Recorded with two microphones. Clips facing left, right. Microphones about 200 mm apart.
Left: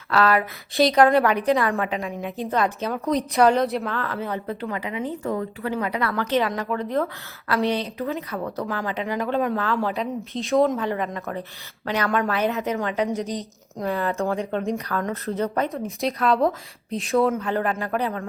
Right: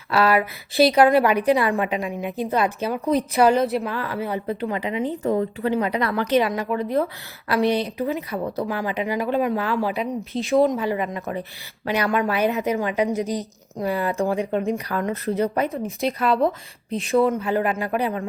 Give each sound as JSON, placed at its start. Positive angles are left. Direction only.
{"t": 0.1, "sound": "a woman's voice", "side_deg": -10}
{"t": 3.8, "sound": "a woman's voice", "side_deg": -10}
{"t": 10.1, "sound": "a woman's voice", "side_deg": 0}